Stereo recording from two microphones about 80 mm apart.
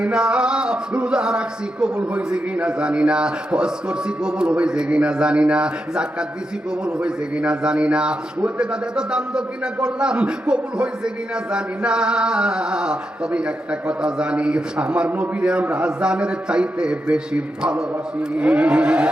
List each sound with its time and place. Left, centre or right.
0.0 s speech: centre